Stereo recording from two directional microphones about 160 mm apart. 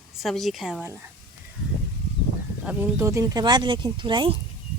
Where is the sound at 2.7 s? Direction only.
15° right (ahead or behind); by 4.4 s 30° right (ahead or behind).